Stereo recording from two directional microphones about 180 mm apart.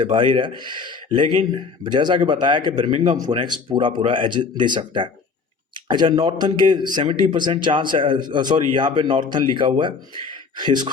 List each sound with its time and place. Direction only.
0.1 s a man's voice: 25° right (ahead or behind)
3.0 s speech: 40° right (ahead or behind)
3.2 s a man's voice: 25° right (ahead or behind)